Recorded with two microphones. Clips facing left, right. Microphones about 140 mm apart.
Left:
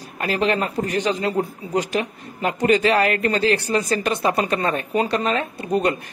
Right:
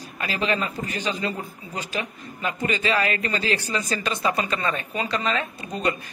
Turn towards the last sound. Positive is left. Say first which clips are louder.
# left 6 dB
turn(degrees=60)  # may be behind; listen again after turning